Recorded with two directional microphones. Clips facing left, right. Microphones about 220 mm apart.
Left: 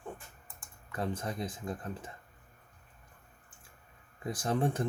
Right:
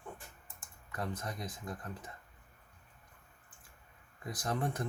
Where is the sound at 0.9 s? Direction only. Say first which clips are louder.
Left 4 dB; 30° left (ahead or behind).